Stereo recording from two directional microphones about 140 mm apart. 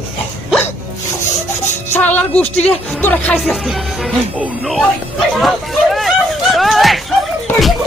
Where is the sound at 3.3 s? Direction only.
Centre (ahead or behind).